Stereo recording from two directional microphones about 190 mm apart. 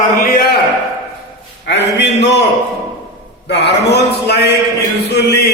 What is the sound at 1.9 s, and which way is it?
Speech, 65° left (ahead or behind).